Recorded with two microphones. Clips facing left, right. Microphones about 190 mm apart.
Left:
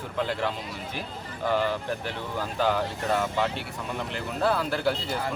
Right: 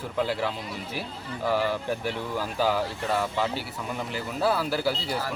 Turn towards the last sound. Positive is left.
turn(degrees=-5)  # may be behind; listen again after turning